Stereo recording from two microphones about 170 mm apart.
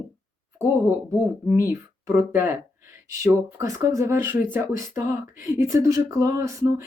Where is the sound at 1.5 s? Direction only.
15° right (ahead or behind).